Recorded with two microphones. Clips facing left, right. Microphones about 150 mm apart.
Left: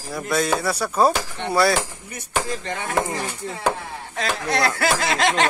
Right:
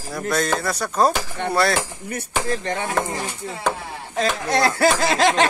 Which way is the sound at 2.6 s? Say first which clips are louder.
Right 4 dB; 35° right (ahead or behind).